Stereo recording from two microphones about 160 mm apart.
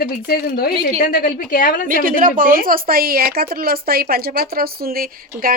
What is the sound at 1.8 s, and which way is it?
A woman's voice, 60° right (ahead or behind).